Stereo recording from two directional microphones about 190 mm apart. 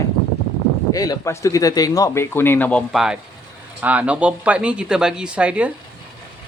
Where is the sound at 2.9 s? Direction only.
5° right (ahead or behind).